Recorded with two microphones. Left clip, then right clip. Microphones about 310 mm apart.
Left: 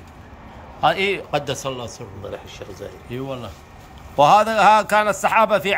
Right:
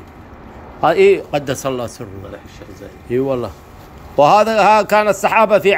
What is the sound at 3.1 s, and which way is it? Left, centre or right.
A man's voice, centre.